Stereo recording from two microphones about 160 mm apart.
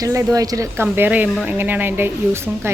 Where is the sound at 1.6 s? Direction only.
10° right (ahead or behind).